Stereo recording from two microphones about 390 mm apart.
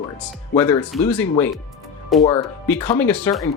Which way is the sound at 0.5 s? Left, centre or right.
Centre.